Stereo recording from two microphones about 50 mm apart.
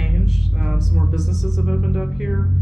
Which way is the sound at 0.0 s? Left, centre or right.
Centre.